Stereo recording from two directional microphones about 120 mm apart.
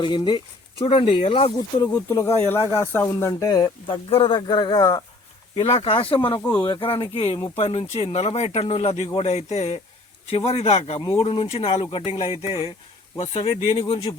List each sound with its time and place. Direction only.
0.0 s speech: 40° left (ahead or behind)
1.5 s speech: 30° left (ahead or behind)
4.1 s speech: 45° left (ahead or behind)
5.5 s speech: 50° left (ahead or behind)
6.4 s speech: 15° left (ahead or behind)
6.7 s speech: 45° left (ahead or behind); by 9.8 s 65° left (ahead or behind)
10.2 s speech: 55° left (ahead or behind)
13.5 s speech: 30° left (ahead or behind)
13.7 s speech: 55° left (ahead or behind)